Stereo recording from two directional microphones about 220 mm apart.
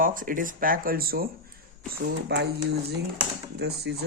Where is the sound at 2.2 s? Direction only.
50° right (ahead or behind).